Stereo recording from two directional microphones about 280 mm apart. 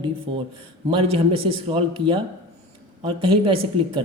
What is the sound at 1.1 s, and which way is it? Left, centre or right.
Speech, right.